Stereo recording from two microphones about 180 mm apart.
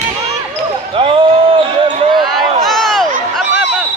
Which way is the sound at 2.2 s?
Centre (ahead or behind).